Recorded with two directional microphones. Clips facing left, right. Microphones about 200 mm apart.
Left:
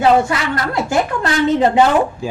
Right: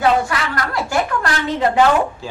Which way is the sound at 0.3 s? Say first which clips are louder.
Left 3 dB; 25° left (ahead or behind).